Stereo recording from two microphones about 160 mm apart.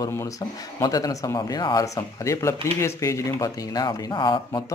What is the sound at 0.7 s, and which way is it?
Speech, 25° left (ahead or behind).